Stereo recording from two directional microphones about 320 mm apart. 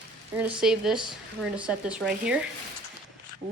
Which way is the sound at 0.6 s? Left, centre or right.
Centre.